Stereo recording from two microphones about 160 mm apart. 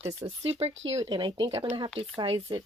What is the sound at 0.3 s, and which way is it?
Speech, 40° right (ahead or behind).